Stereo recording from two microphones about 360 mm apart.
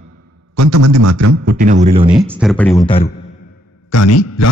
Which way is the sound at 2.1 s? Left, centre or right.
Centre.